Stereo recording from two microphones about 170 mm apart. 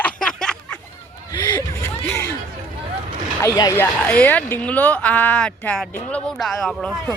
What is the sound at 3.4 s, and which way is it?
Speech, 20° left (ahead or behind).